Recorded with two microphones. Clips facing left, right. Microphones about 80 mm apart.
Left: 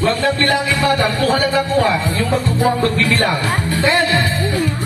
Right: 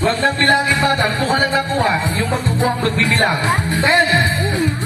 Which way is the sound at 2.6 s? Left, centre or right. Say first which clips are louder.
Left 1 dB; right.